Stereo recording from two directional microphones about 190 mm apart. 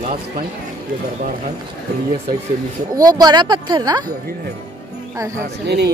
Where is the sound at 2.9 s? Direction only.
20° right (ahead or behind).